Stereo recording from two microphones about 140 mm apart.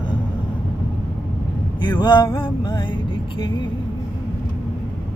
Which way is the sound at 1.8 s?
30° left (ahead or behind).